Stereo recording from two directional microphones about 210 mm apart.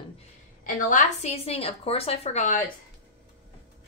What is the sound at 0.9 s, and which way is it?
Speech, 35° left (ahead or behind).